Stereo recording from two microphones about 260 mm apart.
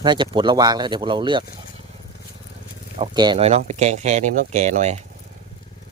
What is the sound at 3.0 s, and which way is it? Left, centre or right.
Speech, centre.